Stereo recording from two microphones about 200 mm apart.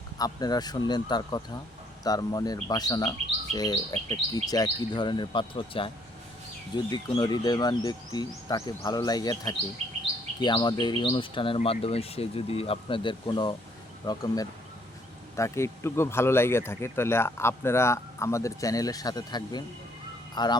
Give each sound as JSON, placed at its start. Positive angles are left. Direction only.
{"t": 0.2, "sound": "speech", "side_deg": 20}
{"t": 6.9, "sound": "speech", "side_deg": 20}
{"t": 15.4, "sound": "speech", "side_deg": 15}